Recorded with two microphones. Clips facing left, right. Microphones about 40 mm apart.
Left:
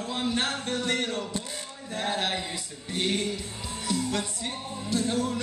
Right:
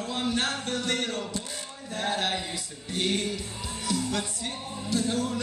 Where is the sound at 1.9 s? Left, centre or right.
Left.